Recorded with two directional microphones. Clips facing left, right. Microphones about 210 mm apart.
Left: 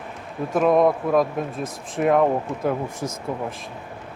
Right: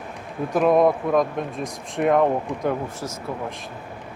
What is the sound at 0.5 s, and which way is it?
Speech, centre (ahead or behind).